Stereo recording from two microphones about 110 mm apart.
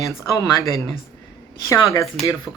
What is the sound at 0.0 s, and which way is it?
Speech, 30° left (ahead or behind).